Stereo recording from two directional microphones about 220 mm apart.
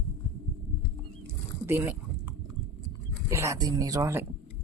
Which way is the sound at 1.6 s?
10° right (ahead or behind).